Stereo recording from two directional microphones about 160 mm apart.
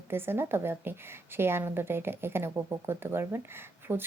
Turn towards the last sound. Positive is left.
turn(degrees=-15)  # may be behind; listen again after turning